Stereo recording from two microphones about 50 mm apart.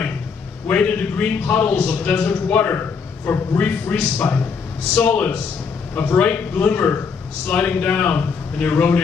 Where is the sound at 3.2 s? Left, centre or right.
Left.